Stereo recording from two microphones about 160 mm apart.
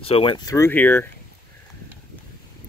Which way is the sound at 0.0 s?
35° left (ahead or behind).